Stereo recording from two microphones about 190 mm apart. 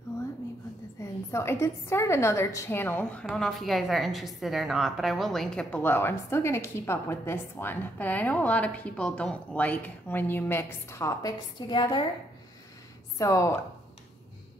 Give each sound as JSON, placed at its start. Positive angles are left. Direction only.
{"t": 0.9, "sound": "a woman's voice", "side_deg": 15}
{"t": 13.2, "sound": "a woman's voice", "side_deg": 15}